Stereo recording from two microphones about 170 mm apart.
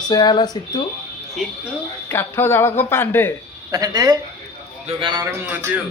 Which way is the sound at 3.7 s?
20° right (ahead or behind).